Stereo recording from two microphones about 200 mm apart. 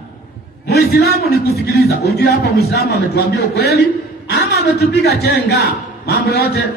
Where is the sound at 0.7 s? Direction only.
55° left (ahead or behind).